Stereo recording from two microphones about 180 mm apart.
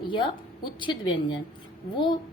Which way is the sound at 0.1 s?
25° left (ahead or behind).